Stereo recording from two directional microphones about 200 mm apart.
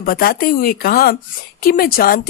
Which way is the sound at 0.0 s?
50° left (ahead or behind).